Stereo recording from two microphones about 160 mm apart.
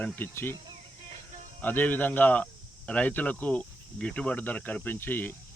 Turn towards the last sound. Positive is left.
turn(degrees=15)  # may be behind; listen again after turning